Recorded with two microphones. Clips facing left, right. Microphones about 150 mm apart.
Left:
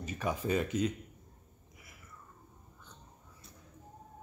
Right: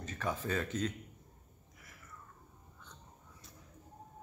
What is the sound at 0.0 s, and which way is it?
Speech, 10° left (ahead or behind).